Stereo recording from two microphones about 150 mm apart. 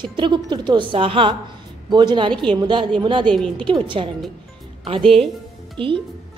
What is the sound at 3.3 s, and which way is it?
Speech, 5° left (ahead or behind).